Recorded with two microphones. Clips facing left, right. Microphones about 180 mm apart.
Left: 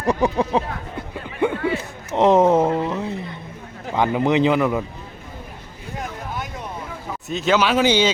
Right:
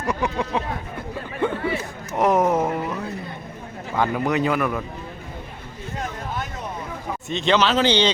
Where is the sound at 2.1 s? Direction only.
25° left (ahead or behind).